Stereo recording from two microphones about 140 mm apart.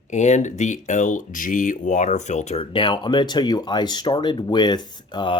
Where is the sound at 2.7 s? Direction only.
35° left (ahead or behind).